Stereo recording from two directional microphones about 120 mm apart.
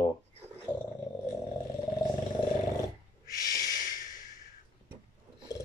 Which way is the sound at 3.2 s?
30° left (ahead or behind).